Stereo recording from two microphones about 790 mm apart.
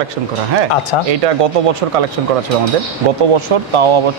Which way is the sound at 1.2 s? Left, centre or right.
Right.